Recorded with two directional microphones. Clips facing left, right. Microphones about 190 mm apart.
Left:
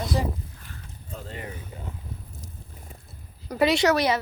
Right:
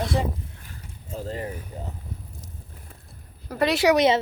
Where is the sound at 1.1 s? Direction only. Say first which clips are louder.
Right 6 dB; 35° right (ahead or behind).